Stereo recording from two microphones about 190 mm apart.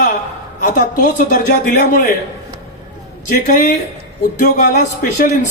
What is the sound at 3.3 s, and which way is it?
A man's voice, 45° left (ahead or behind).